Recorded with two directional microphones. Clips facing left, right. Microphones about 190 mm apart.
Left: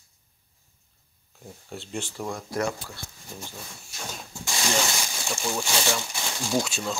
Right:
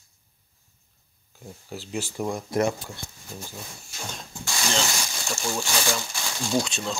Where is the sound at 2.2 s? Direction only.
20° right (ahead or behind).